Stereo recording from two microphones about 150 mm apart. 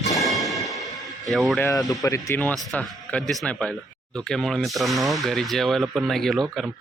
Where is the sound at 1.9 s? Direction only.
20° left (ahead or behind).